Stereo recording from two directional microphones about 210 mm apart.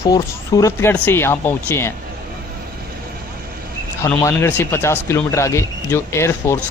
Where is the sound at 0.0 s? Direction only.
15° left (ahead or behind).